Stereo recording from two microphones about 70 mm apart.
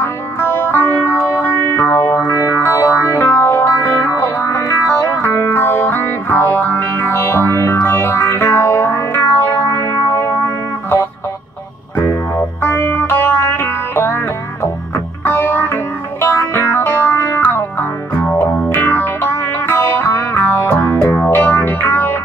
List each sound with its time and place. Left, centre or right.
0.0 s music: left
12.4 s music: left